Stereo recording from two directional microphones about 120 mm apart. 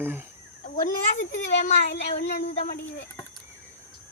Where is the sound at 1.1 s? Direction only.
90° left.